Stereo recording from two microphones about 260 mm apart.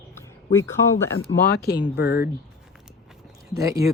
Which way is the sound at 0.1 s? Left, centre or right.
Centre.